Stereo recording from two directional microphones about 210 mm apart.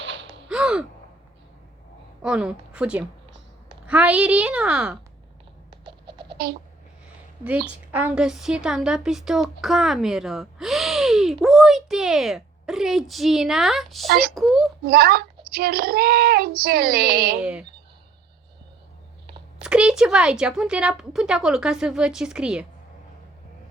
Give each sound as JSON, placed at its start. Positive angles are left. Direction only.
{"t": 0.0, "sound": "gasp", "side_deg": -60}
{"t": 0.4, "sound": "gasp", "side_deg": -5}
{"t": 2.2, "sound": "a woman's voice", "side_deg": -5}
{"t": 5.7, "sound": "a sound", "side_deg": -20}
{"t": 7.7, "sound": "a woman's voice", "side_deg": -10}
{"t": 14.1, "sound": "speech", "side_deg": -45}
{"t": 14.3, "sound": "a woman's voice", "side_deg": 0}
{"t": 14.8, "sound": "speech", "side_deg": -45}
{"t": 19.6, "sound": "a woman's voice", "side_deg": -5}